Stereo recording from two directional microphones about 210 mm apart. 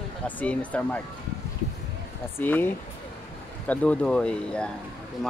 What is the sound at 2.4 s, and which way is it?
Speech, 10° left (ahead or behind).